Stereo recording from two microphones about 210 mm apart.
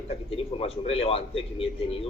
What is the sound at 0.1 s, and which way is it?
A man's voice, 25° left (ahead or behind).